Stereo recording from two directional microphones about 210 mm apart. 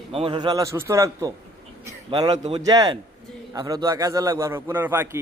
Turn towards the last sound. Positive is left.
turn(degrees=-10)  # may be behind; listen again after turning